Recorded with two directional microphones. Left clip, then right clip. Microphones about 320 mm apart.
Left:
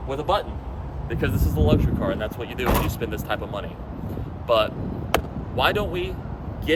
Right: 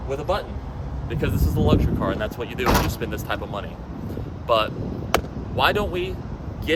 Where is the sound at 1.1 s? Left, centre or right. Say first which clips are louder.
Even; centre.